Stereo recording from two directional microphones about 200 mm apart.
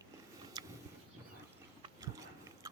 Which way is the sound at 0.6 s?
20° right (ahead or behind).